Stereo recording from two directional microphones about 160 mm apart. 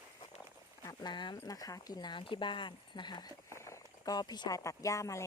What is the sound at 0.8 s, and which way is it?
Speech, 25° left (ahead or behind).